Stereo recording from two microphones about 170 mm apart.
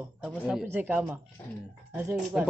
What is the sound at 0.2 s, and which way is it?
A man's voice, 5° right (ahead or behind).